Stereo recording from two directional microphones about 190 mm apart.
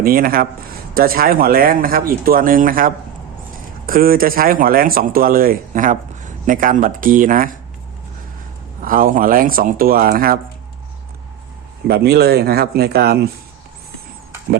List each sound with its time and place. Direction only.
0.0 s speech: 50° right (ahead or behind)
8.8 s speech: 45° right (ahead or behind)
11.9 s speech: 55° right (ahead or behind)